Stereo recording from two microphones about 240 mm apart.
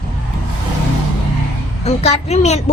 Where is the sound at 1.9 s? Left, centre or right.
Left.